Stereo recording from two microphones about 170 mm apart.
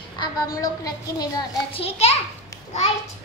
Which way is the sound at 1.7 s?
35° left (ahead or behind).